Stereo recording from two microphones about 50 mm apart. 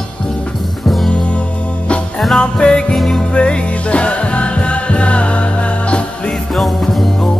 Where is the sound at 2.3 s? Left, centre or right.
Centre.